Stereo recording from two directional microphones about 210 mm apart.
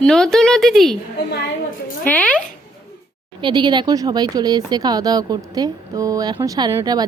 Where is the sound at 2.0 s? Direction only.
5° left (ahead or behind).